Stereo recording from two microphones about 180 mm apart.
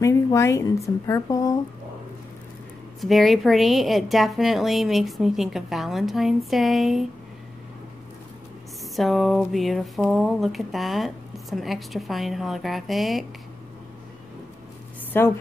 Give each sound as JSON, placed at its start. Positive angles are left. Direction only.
{"t": 0.0, "sound": "a woman's voice", "side_deg": 15}
{"t": 3.0, "sound": "speech", "side_deg": 0}
{"t": 8.9, "sound": "speech", "side_deg": 0}
{"t": 15.1, "sound": "a woman's voice", "side_deg": 10}